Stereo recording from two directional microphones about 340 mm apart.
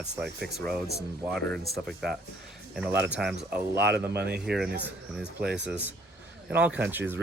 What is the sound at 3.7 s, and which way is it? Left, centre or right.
Speech, right.